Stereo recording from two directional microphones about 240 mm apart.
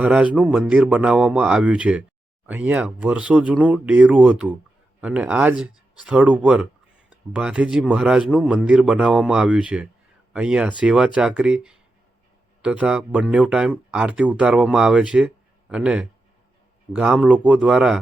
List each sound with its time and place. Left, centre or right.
0.0 s speech: centre